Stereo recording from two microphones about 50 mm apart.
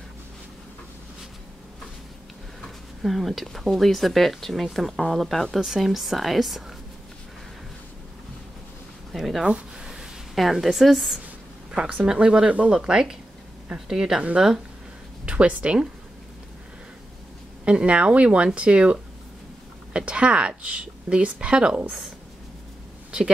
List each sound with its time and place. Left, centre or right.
3.0 s speech: centre
9.1 s speech: centre
9.4 s speech: centre
11.7 s a woman's voice: centre
15.2 s a woman's voice: right
17.6 s a woman's voice: right